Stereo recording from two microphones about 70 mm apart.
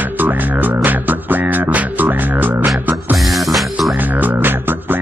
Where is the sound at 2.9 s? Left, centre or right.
Centre.